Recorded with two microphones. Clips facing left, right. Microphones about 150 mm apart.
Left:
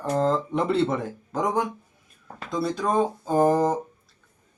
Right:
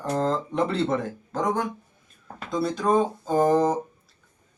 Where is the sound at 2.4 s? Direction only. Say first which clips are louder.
Right 2 dB; centre (ahead or behind).